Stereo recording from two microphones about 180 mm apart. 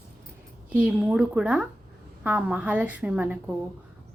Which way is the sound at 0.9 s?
5° right (ahead or behind).